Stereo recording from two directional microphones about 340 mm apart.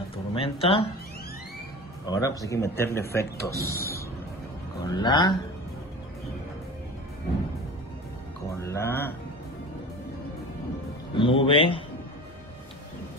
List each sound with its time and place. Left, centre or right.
0.1 s speech: centre
2.0 s speech: centre
8.5 s speech: centre
11.1 s speech: centre